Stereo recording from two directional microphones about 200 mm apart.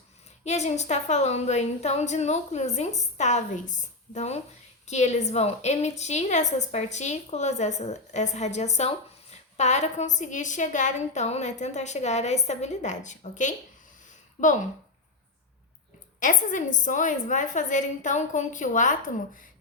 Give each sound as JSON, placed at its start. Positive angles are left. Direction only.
{"t": 0.4, "sound": "a woman's voice", "side_deg": 35}
{"t": 16.2, "sound": "a woman's voice", "side_deg": 40}